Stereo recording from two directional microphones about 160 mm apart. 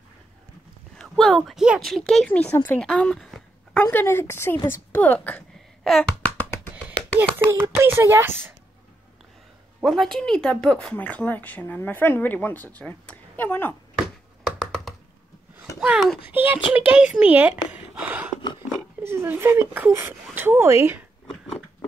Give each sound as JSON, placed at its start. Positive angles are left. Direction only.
{"t": 0.9, "sound": "speech", "side_deg": 5}
{"t": 3.8, "sound": "speech", "side_deg": 15}
{"t": 5.9, "sound": "a sound", "side_deg": 0}
{"t": 6.3, "sound": "music", "side_deg": 10}
{"t": 7.2, "sound": "speech", "side_deg": -15}
{"t": 9.8, "sound": "speech", "side_deg": 0}
{"t": 14.4, "sound": "computer keyboard", "side_deg": 0}
{"t": 15.8, "sound": "speech", "side_deg": -5}